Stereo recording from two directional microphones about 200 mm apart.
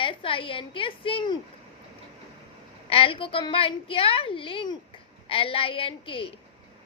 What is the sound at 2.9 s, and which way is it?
A woman's voice, 25° left (ahead or behind).